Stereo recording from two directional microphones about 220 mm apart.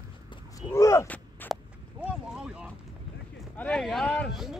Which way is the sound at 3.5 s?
5° left (ahead or behind).